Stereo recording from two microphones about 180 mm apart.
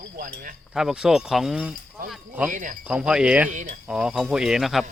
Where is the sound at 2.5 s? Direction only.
45° right (ahead or behind).